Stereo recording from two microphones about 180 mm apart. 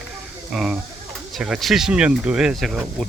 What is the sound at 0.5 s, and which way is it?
Speech, centre (ahead or behind).